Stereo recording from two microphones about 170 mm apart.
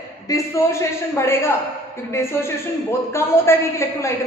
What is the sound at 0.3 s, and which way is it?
A woman's voice, 20° left (ahead or behind).